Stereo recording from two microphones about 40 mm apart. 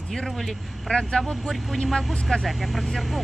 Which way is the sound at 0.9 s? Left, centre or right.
Centre.